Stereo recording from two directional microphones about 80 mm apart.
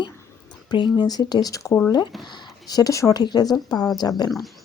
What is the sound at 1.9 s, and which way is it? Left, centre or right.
Speech, left.